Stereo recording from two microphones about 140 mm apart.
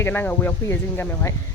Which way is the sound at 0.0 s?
15° left (ahead or behind).